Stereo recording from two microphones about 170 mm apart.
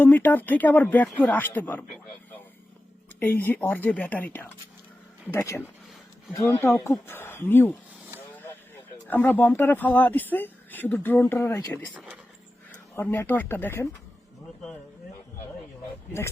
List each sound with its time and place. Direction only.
0.0 s speech: 10° left (ahead or behind)
3.2 s speech: 10° left (ahead or behind)
13.0 s speech: 10° left (ahead or behind)